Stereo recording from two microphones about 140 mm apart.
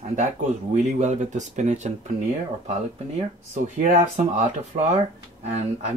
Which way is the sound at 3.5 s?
60° right (ahead or behind).